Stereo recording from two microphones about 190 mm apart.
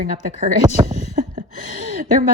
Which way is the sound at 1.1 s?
45° right (ahead or behind).